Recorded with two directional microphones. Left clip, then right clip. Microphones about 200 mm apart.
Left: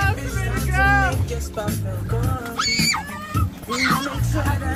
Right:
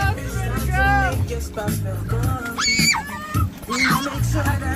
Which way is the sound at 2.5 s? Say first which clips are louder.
Right 2 dB; 15° left (ahead or behind).